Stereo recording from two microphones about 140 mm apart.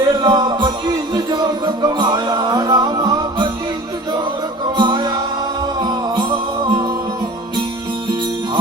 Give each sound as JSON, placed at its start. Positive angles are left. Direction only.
{"t": 0.0, "sound": "music", "side_deg": -30}
{"t": 4.8, "sound": "music", "side_deg": -30}